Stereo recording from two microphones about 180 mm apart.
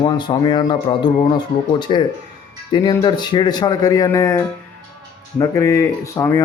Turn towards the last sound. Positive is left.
turn(degrees=15)  # may be behind; listen again after turning